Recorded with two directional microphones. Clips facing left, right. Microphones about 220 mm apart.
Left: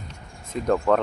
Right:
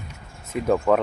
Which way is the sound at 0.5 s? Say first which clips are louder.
Right 1 dB; centre (ahead or behind).